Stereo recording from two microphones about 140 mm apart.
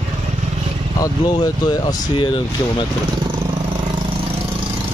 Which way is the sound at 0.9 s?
25° left (ahead or behind).